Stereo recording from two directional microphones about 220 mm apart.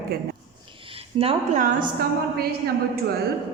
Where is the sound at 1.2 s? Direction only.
40° right (ahead or behind).